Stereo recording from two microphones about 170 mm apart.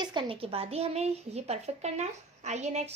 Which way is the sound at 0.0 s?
25° right (ahead or behind).